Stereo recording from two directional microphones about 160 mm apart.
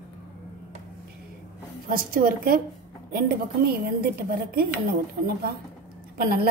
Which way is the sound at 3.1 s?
70° right (ahead or behind).